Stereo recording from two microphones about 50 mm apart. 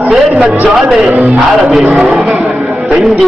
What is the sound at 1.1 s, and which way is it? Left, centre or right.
Speech, right.